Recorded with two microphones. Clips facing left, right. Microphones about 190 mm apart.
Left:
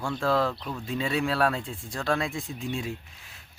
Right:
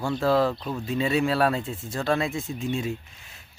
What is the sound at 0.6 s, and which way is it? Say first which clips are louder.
Speech: right 4 dB; 20° right (ahead or behind).